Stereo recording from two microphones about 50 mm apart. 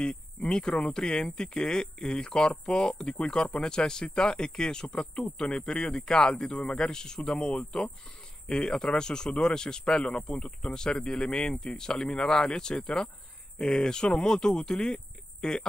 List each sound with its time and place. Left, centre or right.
0.1 s speech: centre